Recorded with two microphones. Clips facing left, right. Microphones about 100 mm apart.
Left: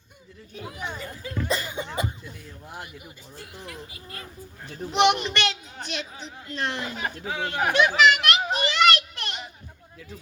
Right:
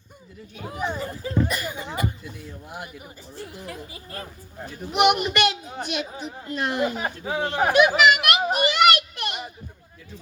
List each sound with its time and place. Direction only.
0.6 s speech: 35° right (ahead or behind)
1.5 s chuckle: 25° left (ahead or behind)
3.3 s speech: 35° right (ahead or behind)
4.9 s a child's voice: 10° right (ahead or behind)
6.9 s speech: 30° right (ahead or behind)
7.7 s a sound: 10° right (ahead or behind)